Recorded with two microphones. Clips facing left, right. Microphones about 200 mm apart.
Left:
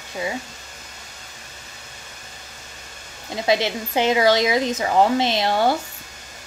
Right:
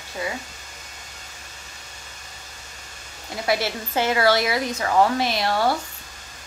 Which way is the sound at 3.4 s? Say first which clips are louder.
Left 3 dB; 20° left (ahead or behind).